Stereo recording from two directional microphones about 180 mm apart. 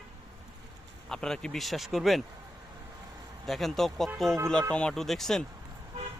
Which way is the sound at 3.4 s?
Centre (ahead or behind).